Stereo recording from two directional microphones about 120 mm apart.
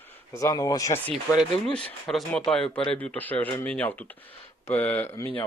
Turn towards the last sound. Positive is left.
turn(degrees=20)  # may be behind; listen again after turning